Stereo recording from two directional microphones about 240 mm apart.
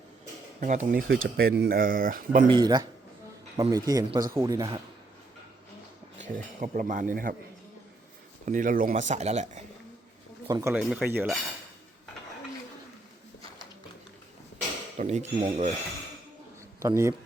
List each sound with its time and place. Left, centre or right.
0.6 s speech: right
2.5 s speech: centre
6.1 s speech: right
8.4 s speech: right
10.4 s speech: centre
14.9 s speech: right
16.8 s speech: centre